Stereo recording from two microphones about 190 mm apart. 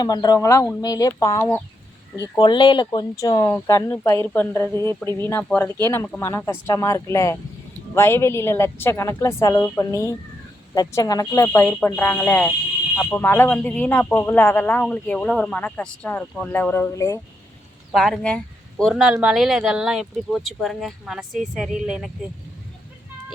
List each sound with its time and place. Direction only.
0.0 s speech: 20° left (ahead or behind)
17.9 s speech: centre (ahead or behind)